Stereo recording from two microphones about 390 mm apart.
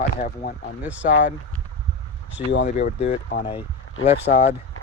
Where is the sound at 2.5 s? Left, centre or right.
Centre.